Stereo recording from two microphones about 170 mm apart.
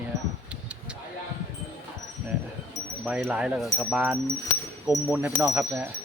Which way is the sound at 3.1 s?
10° right (ahead or behind).